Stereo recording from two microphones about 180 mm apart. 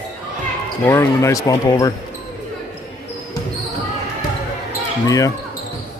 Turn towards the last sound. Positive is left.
turn(degrees=20)  # may be behind; listen again after turning